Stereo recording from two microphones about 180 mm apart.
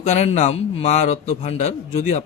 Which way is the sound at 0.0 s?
40° left (ahead or behind).